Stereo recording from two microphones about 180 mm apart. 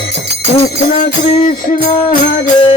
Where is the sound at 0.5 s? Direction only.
45° left (ahead or behind).